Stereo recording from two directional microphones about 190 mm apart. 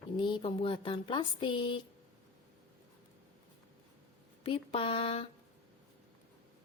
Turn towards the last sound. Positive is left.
turn(degrees=30)  # may be behind; listen again after turning